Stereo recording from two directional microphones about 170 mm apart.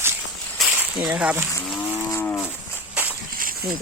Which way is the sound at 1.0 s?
5° right (ahead or behind).